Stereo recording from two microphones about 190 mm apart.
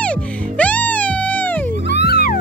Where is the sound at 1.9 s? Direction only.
60° left (ahead or behind).